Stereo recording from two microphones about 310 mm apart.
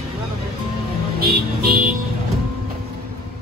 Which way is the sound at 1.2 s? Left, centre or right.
Right.